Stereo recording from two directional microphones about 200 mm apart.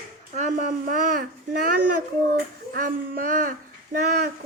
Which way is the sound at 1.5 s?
45° right (ahead or behind).